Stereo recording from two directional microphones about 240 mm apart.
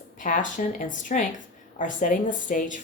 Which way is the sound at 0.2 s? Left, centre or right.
Left.